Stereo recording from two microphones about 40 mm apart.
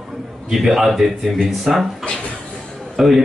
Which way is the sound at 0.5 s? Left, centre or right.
Centre.